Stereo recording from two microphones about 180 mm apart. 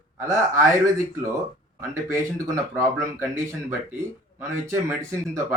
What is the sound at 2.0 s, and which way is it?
Speech, 15° right (ahead or behind).